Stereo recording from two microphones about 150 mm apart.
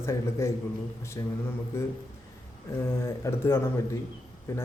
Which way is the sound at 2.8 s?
15° left (ahead or behind).